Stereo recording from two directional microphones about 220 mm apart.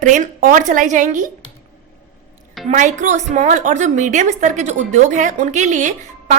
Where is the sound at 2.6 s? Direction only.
35° right (ahead or behind).